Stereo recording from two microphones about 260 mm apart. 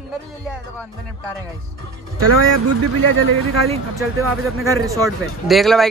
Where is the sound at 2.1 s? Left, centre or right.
Right.